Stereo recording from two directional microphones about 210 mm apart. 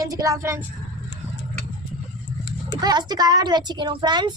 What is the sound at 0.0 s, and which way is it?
Speech, 15° right (ahead or behind).